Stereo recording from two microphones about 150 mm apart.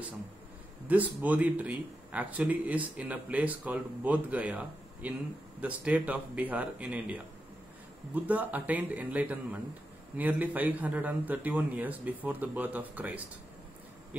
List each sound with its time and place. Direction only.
0.8 s speech: 10° right (ahead or behind)